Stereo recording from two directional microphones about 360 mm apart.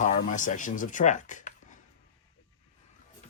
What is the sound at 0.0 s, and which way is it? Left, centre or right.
Speech, left.